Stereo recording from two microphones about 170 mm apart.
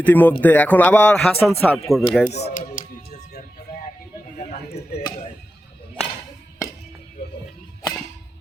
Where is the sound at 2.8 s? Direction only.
50° left (ahead or behind).